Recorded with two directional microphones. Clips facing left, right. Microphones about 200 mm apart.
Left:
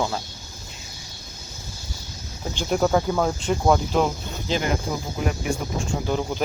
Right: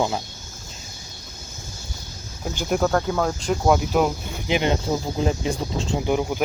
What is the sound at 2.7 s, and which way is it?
Speech, 5° left (ahead or behind).